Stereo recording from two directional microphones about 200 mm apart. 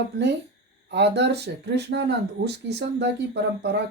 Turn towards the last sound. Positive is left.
turn(degrees=-60)  # may be behind; listen again after turning